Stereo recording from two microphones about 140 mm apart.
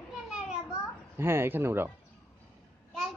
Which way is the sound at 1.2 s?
15° right (ahead or behind).